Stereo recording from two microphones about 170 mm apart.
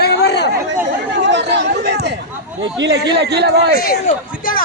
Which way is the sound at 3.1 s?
80° right.